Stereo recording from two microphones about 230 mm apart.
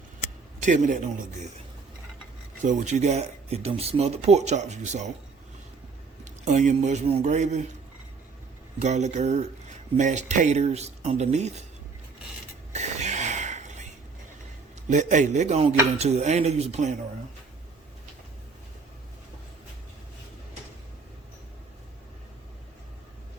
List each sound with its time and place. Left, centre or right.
0.6 s a man's voice: right
2.6 s speech: right
6.2 s a man's voice: right
8.8 s speech: right
12.7 s a sound: right
14.8 s speech: right